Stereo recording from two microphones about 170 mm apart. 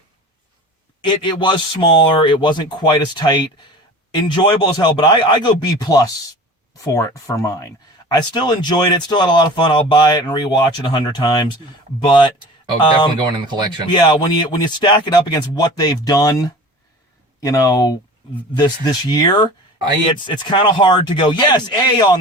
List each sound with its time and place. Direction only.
1.0 s speech: 30° left (ahead or behind)
13.1 s speech: 25° right (ahead or behind)
13.9 s speech: 25° left (ahead or behind)